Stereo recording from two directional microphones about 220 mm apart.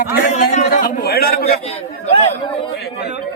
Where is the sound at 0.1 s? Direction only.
40° left (ahead or behind).